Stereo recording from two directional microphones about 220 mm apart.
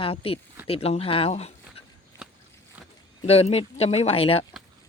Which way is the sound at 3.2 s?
25° left (ahead or behind).